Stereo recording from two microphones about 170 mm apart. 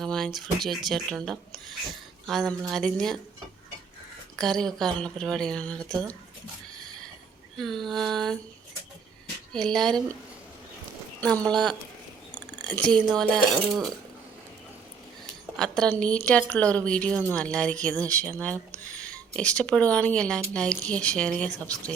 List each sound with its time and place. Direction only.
0.0 s speech: 5° left (ahead or behind)
4.4 s speech: 5° left (ahead or behind)
7.5 s speech: centre (ahead or behind)
9.5 s speech: 5° left (ahead or behind)
11.4 s speech: 5° left (ahead or behind)
15.5 s speech: 5° left (ahead or behind)
18.9 s a sound: 5° left (ahead or behind)
19.4 s speech: 5° left (ahead or behind)